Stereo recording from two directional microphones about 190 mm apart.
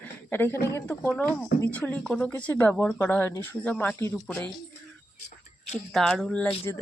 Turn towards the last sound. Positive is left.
turn(degrees=5)  # may be behind; listen again after turning